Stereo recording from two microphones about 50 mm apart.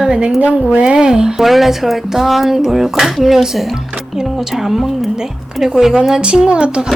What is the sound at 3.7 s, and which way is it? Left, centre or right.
Music, centre.